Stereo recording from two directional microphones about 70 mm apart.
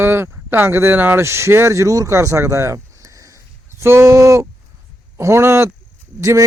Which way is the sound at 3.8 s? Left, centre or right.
Right.